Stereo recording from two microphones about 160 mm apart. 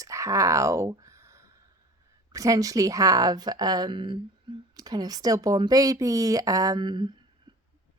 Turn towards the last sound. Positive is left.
turn(degrees=-30)  # may be behind; listen again after turning